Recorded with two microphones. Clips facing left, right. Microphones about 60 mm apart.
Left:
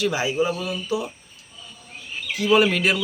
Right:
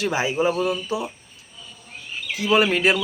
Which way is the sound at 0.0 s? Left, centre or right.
Right.